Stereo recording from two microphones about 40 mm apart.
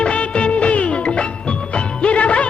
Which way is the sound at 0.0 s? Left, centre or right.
Left.